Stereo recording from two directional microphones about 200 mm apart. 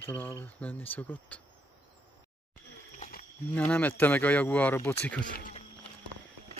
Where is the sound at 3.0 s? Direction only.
40° left (ahead or behind).